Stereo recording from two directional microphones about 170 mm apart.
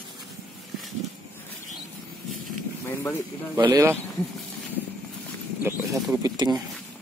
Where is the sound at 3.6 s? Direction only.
25° right (ahead or behind).